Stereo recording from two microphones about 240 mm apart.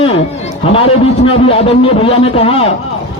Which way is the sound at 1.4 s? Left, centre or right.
Left.